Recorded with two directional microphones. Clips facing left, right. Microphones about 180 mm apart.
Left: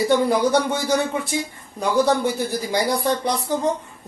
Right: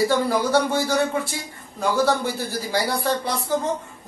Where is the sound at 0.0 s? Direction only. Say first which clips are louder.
Left 3 dB; 20° left (ahead or behind).